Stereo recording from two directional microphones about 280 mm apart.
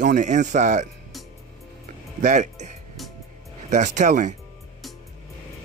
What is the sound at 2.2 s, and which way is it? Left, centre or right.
Speech, right.